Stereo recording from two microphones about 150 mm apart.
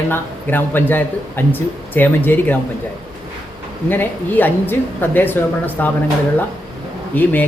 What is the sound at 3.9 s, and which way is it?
Speech, 10° left (ahead or behind).